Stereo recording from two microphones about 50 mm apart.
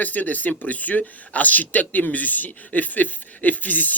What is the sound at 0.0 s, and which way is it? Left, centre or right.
Speech, left.